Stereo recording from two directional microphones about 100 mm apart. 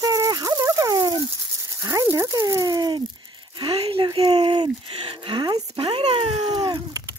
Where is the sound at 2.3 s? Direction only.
40° right (ahead or behind); by 5.5 s 55° right (ahead or behind).